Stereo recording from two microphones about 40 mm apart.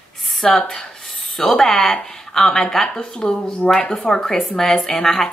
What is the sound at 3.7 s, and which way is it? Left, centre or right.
Speech, left.